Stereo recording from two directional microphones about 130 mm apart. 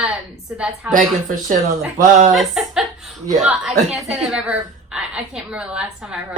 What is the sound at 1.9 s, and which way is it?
Speech, 90° right.